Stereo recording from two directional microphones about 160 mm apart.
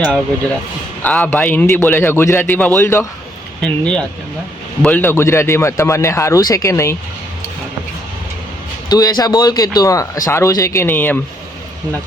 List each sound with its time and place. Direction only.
1.0 s a man's voice: 10° left (ahead or behind)
3.6 s a man's voice: 5° left (ahead or behind)
8.9 s speech: 25° left (ahead or behind)